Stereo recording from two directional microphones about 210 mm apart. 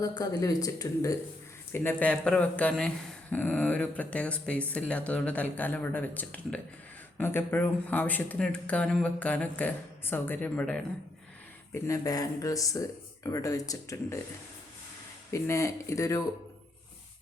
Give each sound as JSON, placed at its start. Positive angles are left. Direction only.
{"t": 0.0, "sound": "speech", "side_deg": 20}
{"t": 15.3, "sound": "speech", "side_deg": 15}